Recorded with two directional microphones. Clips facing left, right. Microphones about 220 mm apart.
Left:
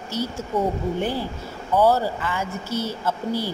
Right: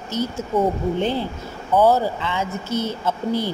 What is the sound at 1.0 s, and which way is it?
A woman's voice, 20° right (ahead or behind).